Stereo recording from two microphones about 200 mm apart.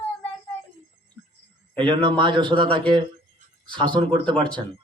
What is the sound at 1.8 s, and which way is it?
Speech, 25° right (ahead or behind).